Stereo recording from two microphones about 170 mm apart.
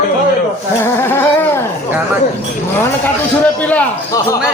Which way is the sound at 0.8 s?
15° left (ahead or behind).